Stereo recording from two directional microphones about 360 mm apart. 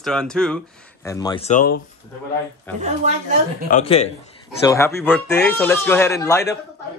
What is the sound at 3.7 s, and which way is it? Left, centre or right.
Speech, centre.